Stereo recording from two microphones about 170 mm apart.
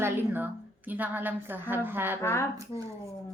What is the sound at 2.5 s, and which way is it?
Speech, 20° right (ahead or behind).